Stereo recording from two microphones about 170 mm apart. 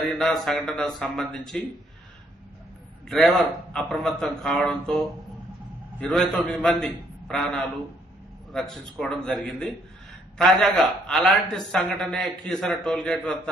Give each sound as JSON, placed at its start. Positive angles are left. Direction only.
{"t": 0.2, "sound": "a man's voice", "side_deg": 0}
{"t": 3.1, "sound": "a man's voice", "side_deg": 0}